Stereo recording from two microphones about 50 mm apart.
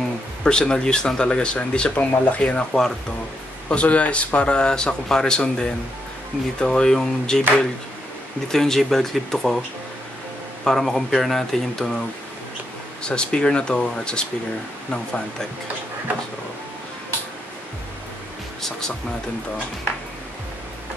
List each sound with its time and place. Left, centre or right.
0.4 s speech: centre
10.6 s speech: centre
13.0 s speech: centre
18.6 s speech: centre